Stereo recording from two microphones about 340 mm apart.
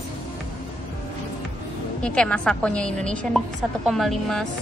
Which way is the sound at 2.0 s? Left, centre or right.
Centre.